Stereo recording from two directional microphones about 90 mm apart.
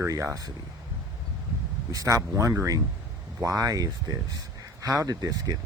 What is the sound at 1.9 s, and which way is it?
Speech, 40° right (ahead or behind).